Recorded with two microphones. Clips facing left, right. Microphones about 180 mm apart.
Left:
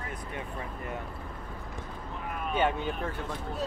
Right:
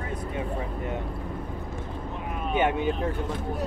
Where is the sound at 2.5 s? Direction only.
15° right (ahead or behind).